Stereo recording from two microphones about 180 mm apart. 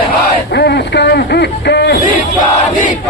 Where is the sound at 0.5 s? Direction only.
65° left (ahead or behind).